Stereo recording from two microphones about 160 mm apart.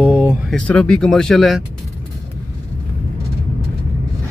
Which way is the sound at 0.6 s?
5° left (ahead or behind).